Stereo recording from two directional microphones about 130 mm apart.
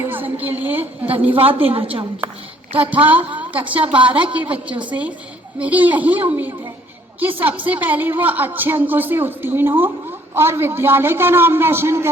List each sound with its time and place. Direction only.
0.0 s a sound: 15° right (ahead or behind)
1.4 s a woman's voice: 45° right (ahead or behind)
2.7 s a woman's voice: 10° right (ahead or behind)